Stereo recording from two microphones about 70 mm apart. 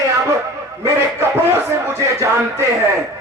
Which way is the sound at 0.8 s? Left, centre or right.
Right.